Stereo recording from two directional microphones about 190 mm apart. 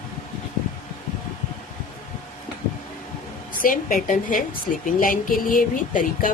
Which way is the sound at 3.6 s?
45° left (ahead or behind).